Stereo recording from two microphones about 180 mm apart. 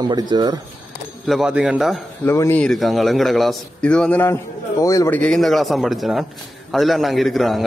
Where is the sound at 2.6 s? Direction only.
Centre (ahead or behind).